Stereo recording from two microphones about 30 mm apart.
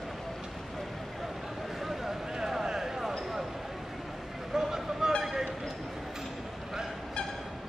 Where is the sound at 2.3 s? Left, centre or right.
Centre.